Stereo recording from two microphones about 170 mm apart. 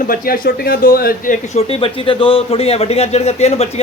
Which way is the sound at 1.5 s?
35° left (ahead or behind).